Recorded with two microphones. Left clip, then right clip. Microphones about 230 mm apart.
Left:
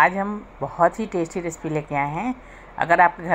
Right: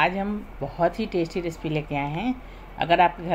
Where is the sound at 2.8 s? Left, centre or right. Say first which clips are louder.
Left 3 dB; centre.